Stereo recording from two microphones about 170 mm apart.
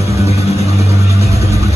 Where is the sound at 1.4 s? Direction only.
20° right (ahead or behind).